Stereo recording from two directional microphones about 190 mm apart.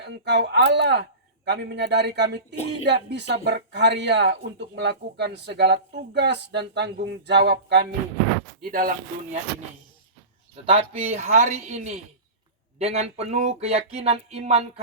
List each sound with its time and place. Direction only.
0.0 s speech: 65° right (ahead or behind)
8.6 s speech: 50° right (ahead or behind)
10.5 s a sound: 30° right (ahead or behind)